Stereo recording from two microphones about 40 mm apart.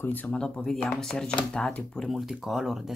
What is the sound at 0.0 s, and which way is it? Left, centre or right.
Speech, left.